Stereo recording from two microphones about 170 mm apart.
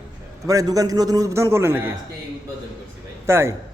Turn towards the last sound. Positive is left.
turn(degrees=-15)  # may be behind; listen again after turning